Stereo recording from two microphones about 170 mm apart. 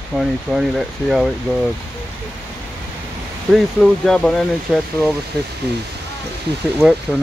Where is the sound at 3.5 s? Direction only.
Centre (ahead or behind).